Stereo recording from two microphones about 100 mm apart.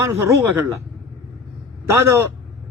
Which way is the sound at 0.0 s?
30° right (ahead or behind).